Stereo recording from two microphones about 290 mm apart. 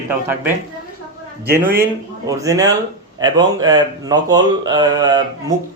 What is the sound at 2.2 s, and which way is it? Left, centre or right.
Speech, centre.